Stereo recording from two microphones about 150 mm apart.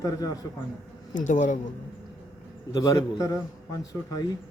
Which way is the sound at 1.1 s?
55° left (ahead or behind).